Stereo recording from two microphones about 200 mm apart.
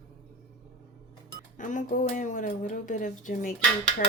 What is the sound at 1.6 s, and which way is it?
A woman's voice, 40° left (ahead or behind).